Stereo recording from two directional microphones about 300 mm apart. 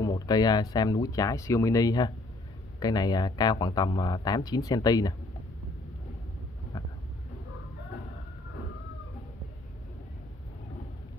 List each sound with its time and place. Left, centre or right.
0.0 s speech: centre